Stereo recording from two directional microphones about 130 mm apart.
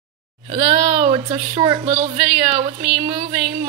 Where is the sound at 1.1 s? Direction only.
40° right (ahead or behind).